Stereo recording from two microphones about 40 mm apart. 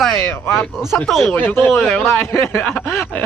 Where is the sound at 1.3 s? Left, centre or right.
Left.